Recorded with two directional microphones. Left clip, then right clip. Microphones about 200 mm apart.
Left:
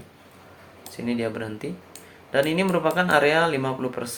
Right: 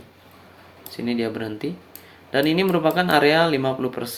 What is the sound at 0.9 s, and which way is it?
Speech, 55° right (ahead or behind).